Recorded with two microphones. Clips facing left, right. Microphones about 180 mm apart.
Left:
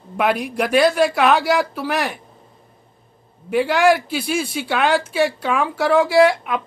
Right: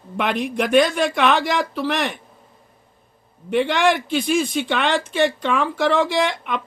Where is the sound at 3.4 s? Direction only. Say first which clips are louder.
Left 2 dB; 5° left (ahead or behind).